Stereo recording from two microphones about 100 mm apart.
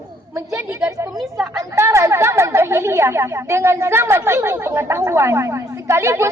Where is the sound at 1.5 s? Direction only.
30° right (ahead or behind).